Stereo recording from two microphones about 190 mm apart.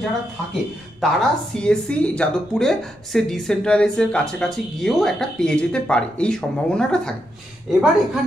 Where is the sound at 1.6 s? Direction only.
5° left (ahead or behind).